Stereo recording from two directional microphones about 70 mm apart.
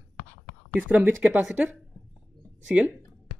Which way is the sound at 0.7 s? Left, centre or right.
Right.